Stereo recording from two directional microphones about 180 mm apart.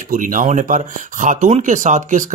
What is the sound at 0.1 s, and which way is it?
Speech, 45° right (ahead or behind).